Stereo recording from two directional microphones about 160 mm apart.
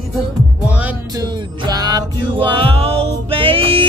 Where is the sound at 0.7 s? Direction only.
10° right (ahead or behind).